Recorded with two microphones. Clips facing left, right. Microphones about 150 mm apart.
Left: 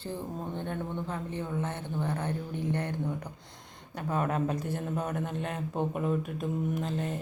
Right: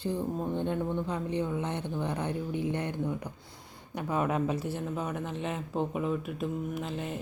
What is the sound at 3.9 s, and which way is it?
Mantra, 10° right (ahead or behind).